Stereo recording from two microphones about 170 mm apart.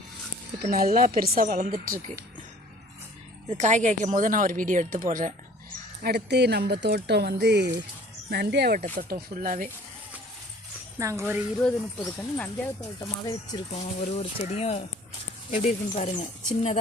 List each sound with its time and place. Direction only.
0.7 s a woman's voice: 60° right (ahead or behind)
3.5 s speech: 45° right (ahead or behind)
6.0 s speech: 75° right (ahead or behind)
8.3 s a woman's voice: 70° right (ahead or behind); by 9.6 s 55° right (ahead or behind)
10.9 s speech: 15° right (ahead or behind)
11.6 s speech: 10° left (ahead or behind)
13.0 s speech: 25° left (ahead or behind)
14.0 s speech: 40° left (ahead or behind)